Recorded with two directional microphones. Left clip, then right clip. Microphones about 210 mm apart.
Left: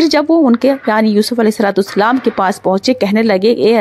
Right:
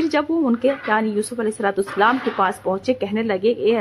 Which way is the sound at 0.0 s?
35° left (ahead or behind).